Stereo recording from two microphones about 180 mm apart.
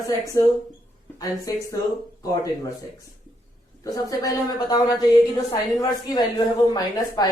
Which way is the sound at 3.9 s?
20° left (ahead or behind).